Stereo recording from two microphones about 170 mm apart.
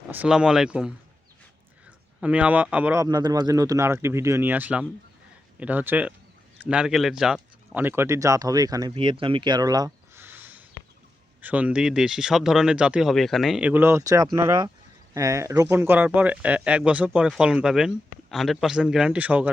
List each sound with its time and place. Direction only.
0.1 s speech: 5° right (ahead or behind)
2.2 s speech: 10° right (ahead or behind)